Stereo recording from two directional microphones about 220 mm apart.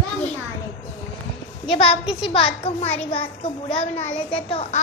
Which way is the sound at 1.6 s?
25° left (ahead or behind).